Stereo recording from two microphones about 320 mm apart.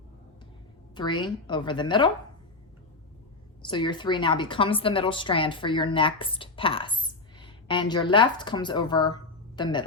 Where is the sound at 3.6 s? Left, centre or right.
Centre.